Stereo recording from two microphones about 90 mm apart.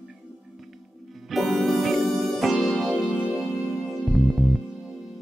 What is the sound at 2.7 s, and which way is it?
Music, 15° right (ahead or behind).